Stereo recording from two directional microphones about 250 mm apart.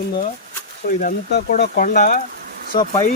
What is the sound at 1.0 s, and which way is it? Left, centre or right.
Speech, left.